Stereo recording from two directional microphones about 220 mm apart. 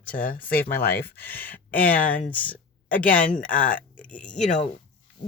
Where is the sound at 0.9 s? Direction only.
10° left (ahead or behind).